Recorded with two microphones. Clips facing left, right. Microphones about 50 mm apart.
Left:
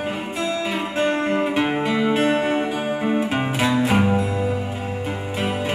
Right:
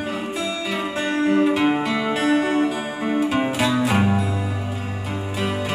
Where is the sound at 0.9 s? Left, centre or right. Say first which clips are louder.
Right 1 dB; left.